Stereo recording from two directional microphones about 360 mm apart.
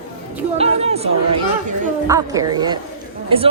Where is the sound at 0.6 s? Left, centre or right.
Centre.